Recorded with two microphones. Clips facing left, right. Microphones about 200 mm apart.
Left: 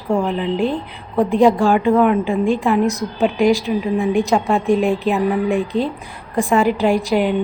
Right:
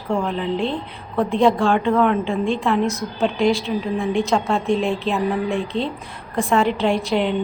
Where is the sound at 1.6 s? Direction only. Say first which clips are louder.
Left 3 dB; 5° left (ahead or behind).